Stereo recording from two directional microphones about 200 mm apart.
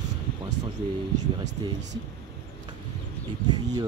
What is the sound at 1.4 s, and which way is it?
Speech, 60° right (ahead or behind).